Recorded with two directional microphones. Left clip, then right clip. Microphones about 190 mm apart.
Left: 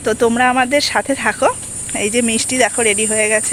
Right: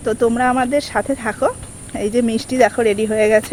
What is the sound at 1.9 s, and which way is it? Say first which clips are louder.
Speech: left 1 dB; 25° right (ahead or behind).